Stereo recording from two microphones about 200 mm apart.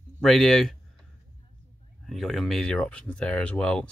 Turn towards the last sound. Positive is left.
turn(degrees=5)  # may be behind; listen again after turning